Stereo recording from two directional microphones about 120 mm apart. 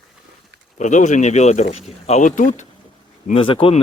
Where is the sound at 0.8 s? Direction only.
90° left.